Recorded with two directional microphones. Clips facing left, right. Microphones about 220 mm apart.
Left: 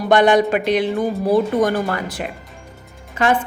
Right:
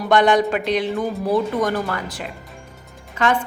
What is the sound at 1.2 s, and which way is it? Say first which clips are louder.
Speech: left 4 dB; 30° left (ahead or behind).